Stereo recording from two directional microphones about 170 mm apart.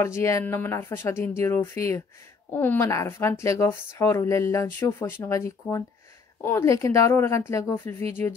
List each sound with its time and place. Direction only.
0.0 s speech: 15° left (ahead or behind)